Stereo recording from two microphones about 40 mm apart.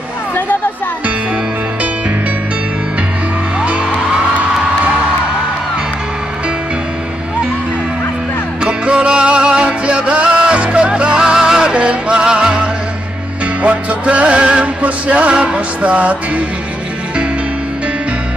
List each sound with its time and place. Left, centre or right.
3.6 s music: right
8.6 s music: right
13.6 s music: right